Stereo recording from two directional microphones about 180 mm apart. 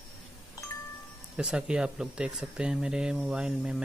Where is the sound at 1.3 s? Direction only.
5° right (ahead or behind).